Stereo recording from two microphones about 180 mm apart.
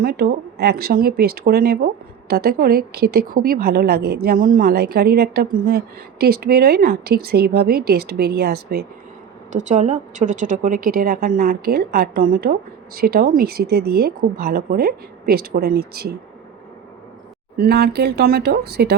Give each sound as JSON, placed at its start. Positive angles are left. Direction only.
{"t": 0.0, "sound": "speech", "side_deg": -60}
{"t": 9.6, "sound": "speech", "side_deg": -40}
{"t": 17.6, "sound": "speech", "side_deg": -60}